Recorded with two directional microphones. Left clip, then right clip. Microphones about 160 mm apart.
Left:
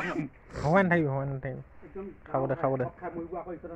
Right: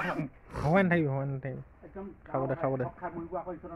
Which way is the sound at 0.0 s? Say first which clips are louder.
Even; 25° right (ahead or behind).